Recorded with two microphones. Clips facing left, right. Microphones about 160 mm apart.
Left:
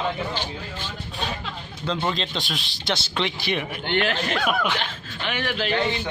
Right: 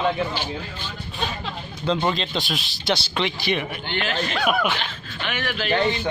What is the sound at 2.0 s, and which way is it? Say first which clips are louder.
Speech: right 3 dB; 5° right (ahead or behind).